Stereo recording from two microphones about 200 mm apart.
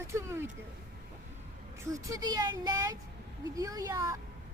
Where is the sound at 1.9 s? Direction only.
15° right (ahead or behind).